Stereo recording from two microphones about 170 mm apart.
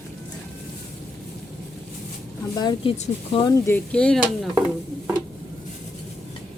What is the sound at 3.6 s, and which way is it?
Speech, 10° left (ahead or behind).